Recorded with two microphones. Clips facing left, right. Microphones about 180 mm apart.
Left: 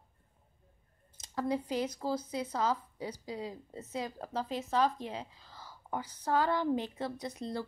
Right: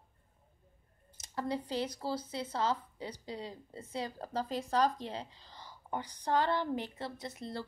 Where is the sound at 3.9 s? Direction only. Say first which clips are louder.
Even; 30° right (ahead or behind).